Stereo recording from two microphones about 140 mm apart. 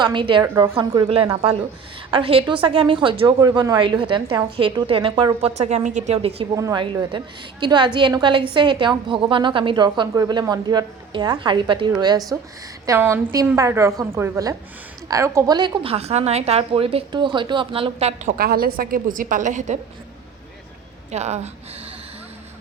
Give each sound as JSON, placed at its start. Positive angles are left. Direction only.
{"t": 0.0, "sound": "a woman's voice", "side_deg": -35}
{"t": 0.4, "sound": "a woman's voice", "side_deg": -25}
{"t": 0.7, "sound": "a woman's voice", "side_deg": -40}
{"t": 5.5, "sound": "speech", "side_deg": -55}
{"t": 6.5, "sound": "a woman's voice", "side_deg": -25}
{"t": 15.5, "sound": "a woman's voice", "side_deg": -35}
{"t": 18.3, "sound": "a woman's voice", "side_deg": -90}
{"t": 21.1, "sound": "speech", "side_deg": -50}